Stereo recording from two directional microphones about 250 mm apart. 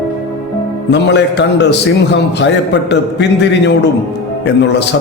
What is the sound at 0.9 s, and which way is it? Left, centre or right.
A man's voice, left.